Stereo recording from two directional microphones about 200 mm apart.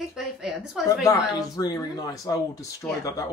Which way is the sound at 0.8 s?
15° left (ahead or behind).